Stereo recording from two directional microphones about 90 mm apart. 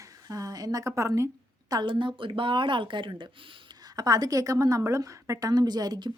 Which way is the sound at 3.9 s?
45° right (ahead or behind).